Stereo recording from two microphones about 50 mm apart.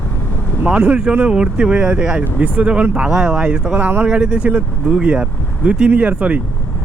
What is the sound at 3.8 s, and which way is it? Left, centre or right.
Speech, right.